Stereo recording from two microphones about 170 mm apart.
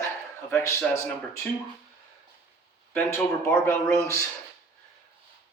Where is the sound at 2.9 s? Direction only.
15° left (ahead or behind).